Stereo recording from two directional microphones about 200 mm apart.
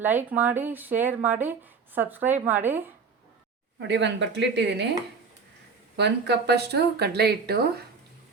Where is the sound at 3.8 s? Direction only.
60° right (ahead or behind).